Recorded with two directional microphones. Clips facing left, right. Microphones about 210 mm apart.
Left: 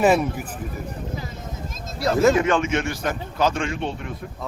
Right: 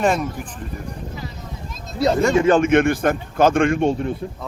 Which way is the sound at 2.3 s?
30° right (ahead or behind).